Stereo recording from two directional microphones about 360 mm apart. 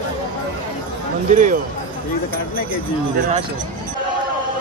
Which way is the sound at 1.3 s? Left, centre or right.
Right.